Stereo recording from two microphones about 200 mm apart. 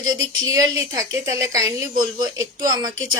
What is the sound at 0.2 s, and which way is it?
A woman's voice, 20° right (ahead or behind).